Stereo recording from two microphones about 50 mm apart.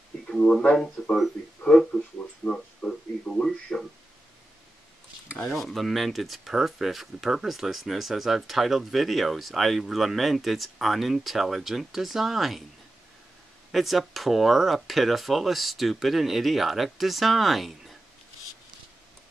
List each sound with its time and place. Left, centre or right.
1.0 s speech: centre
5.5 s speech: centre
13.7 s speech: centre